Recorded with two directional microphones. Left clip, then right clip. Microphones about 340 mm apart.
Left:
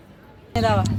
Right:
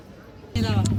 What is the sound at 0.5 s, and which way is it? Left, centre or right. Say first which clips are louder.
Speech: left 9 dB; centre.